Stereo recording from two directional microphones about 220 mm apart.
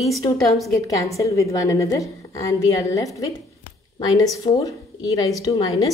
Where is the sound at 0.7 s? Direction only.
15° left (ahead or behind).